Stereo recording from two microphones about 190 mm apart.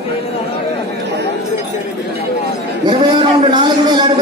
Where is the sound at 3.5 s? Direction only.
25° right (ahead or behind).